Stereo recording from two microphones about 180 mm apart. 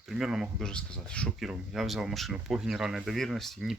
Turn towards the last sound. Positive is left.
turn(degrees=0)  # may be behind; listen again after turning